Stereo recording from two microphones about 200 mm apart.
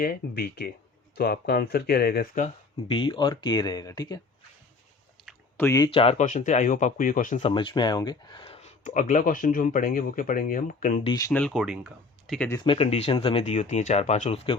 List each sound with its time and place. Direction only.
0.0 s speech: 50° left (ahead or behind)
2.9 s speech: 25° left (ahead or behind)
5.5 s speech: 15° left (ahead or behind)
5.9 s speech: 30° left (ahead or behind)
7.5 s speech: 25° left (ahead or behind); by 11.0 s 40° left (ahead or behind)
11.0 s speech: 20° left (ahead or behind)
11.3 s speech: 5° left (ahead or behind)
12.5 s speech: 20° left (ahead or behind)